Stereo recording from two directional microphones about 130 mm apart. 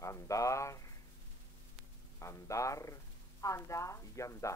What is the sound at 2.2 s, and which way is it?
Speech, 25° left (ahead or behind).